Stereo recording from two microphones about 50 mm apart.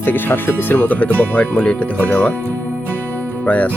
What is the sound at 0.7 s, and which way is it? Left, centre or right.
Speech, left.